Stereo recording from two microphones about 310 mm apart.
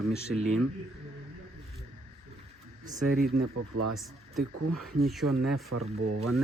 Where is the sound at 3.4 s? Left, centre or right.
Right.